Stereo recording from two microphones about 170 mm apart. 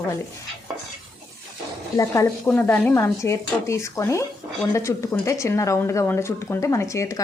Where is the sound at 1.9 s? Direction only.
20° left (ahead or behind).